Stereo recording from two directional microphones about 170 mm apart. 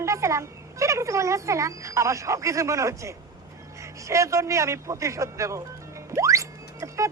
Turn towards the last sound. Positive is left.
turn(degrees=-20)  # may be behind; listen again after turning